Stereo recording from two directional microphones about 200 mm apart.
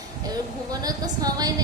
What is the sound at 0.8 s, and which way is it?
Speech, 20° right (ahead or behind).